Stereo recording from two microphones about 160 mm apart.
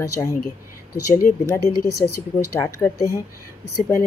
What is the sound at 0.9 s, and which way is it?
Speech, 60° left (ahead or behind).